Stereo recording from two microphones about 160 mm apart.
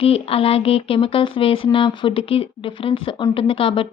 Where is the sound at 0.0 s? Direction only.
35° left (ahead or behind).